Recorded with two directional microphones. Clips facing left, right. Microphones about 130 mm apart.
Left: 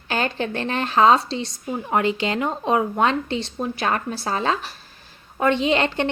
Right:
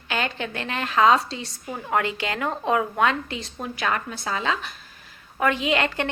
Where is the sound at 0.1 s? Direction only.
35° left (ahead or behind).